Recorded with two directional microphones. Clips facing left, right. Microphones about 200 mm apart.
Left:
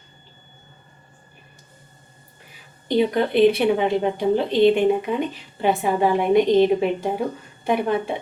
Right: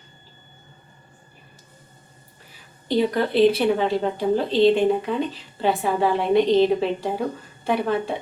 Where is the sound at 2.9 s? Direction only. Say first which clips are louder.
Left 1 dB; 15° left (ahead or behind).